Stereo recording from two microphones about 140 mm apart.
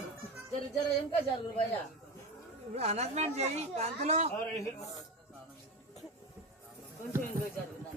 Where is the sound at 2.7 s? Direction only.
50° right (ahead or behind).